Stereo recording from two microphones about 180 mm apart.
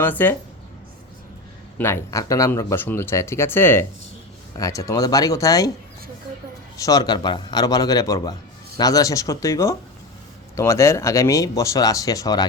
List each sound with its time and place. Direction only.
0.0 s speech: 10° left (ahead or behind)
1.8 s a man's voice: 15° left (ahead or behind)
6.7 s a man's voice: 20° left (ahead or behind)